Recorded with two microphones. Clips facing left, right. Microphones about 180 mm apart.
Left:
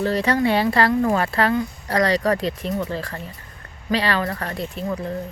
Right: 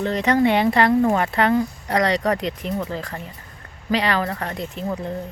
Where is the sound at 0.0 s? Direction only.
20° right (ahead or behind).